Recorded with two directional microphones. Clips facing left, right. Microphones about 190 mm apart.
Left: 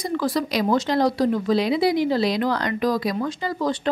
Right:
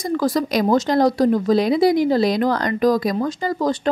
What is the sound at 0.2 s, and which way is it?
Speech, 45° right (ahead or behind).